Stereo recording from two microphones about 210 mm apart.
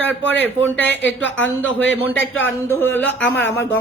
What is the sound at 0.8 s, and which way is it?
Speech, 60° left (ahead or behind).